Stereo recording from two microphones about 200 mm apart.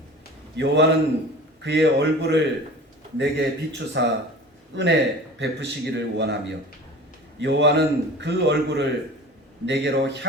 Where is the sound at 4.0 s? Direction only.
65° right (ahead or behind).